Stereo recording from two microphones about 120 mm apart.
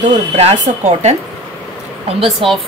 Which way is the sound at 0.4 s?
60° right (ahead or behind).